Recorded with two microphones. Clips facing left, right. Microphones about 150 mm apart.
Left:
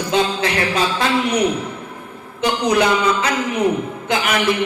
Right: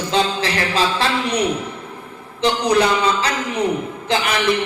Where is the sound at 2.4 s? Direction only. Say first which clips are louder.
Even; 30° right (ahead or behind).